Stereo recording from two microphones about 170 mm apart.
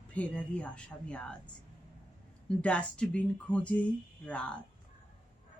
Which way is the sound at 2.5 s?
5° left (ahead or behind).